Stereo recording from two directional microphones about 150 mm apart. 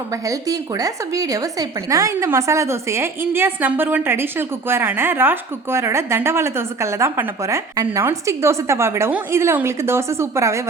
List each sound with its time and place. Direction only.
0.3 s a woman's voice: 25° right (ahead or behind)